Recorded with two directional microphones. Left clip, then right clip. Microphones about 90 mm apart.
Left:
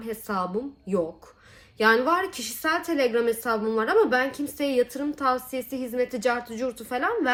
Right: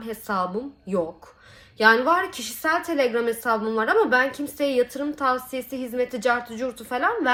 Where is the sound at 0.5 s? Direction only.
25° left (ahead or behind).